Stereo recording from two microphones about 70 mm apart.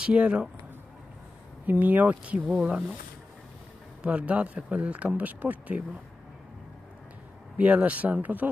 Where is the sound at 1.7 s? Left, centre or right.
Right.